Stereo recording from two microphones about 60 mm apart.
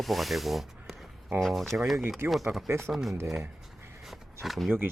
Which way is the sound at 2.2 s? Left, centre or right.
Right.